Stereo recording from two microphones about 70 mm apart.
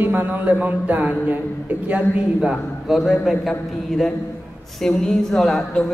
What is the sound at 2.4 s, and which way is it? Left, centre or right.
Speech, centre.